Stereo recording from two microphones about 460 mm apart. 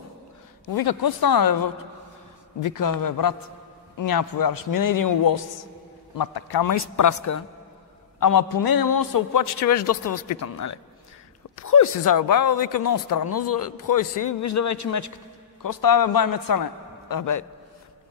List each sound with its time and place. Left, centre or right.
0.7 s a man's voice: left